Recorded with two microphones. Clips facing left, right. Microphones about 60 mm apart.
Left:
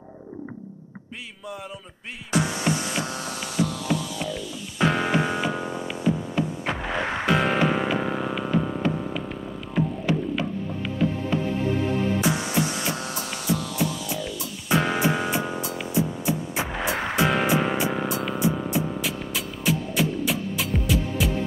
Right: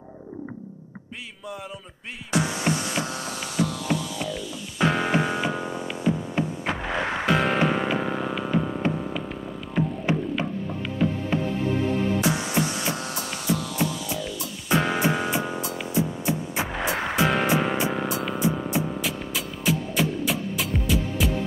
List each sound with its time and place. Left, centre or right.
2.3 s music: centre
10.1 s music: right
12.2 s music: centre